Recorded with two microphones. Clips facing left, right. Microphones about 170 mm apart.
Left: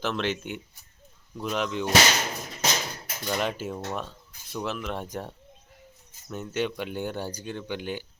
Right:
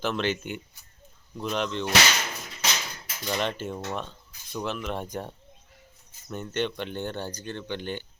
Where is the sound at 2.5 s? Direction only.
45° left (ahead or behind).